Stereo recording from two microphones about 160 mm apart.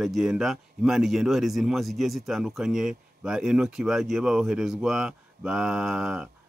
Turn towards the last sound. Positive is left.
turn(degrees=-5)  # may be behind; listen again after turning